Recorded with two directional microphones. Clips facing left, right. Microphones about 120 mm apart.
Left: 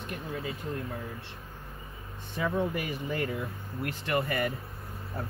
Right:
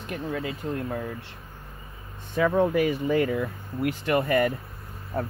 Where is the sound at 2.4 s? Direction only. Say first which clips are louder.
Right 8 dB; 80° right.